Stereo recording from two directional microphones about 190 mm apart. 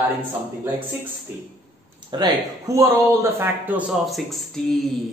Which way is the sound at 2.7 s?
15° right (ahead or behind).